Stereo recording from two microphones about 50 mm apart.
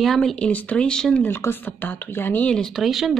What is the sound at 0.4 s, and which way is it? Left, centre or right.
Speech, left.